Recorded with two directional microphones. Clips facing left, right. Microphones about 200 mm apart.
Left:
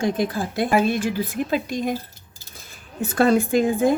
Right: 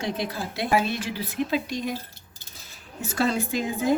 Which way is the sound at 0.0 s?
50° left (ahead or behind).